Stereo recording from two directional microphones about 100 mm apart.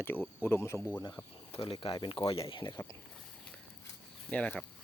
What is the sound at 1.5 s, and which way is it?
Snake, 70° left (ahead or behind).